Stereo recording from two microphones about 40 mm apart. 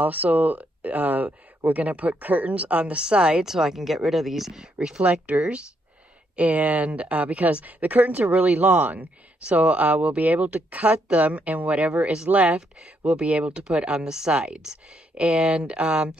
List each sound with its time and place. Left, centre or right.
0.0 s speech: right
3.4 s speech: centre
4.7 s speech: right
6.3 s speech: right
9.4 s speech: right
11.7 s speech: right
14.6 s speech: centre
15.2 s speech: right